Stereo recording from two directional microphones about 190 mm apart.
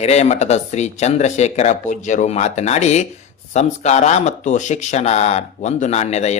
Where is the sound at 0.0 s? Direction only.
35° left (ahead or behind).